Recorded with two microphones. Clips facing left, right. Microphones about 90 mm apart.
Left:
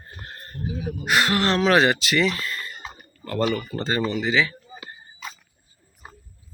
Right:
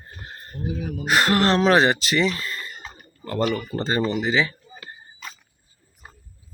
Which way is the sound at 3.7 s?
35° right (ahead or behind).